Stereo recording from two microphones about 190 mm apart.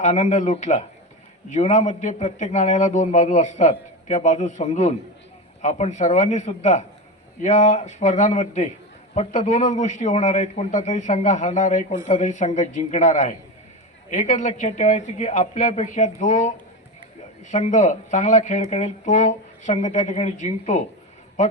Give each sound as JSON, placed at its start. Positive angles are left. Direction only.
{"t": 0.0, "sound": "a man's voice", "side_deg": 40}
{"t": 17.5, "sound": "a man's voice", "side_deg": 40}